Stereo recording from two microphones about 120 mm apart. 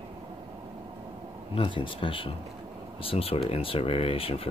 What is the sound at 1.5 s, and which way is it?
Speech, 45° left (ahead or behind).